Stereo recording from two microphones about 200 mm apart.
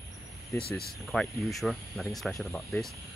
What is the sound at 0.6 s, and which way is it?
Speech, 50° left (ahead or behind).